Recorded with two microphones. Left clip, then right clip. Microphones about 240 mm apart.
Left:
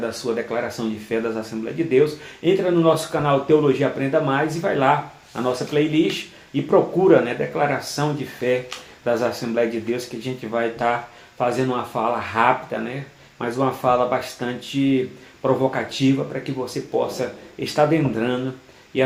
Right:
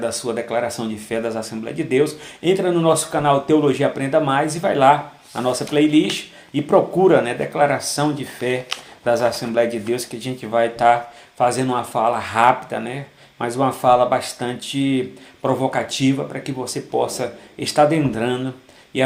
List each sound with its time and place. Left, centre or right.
0.3 s speech: right